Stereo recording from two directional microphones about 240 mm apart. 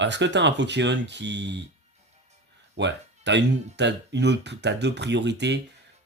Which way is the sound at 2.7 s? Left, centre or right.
Right.